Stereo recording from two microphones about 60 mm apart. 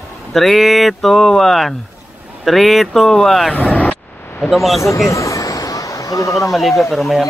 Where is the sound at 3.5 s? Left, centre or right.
Left.